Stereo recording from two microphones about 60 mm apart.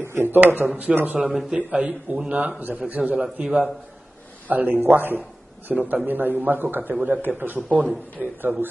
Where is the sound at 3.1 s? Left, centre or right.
Centre.